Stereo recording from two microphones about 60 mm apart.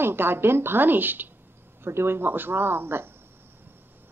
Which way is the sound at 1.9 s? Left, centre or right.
Right.